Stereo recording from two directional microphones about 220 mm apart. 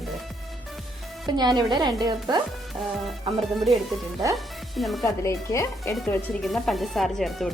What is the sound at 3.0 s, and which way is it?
Speech, centre (ahead or behind).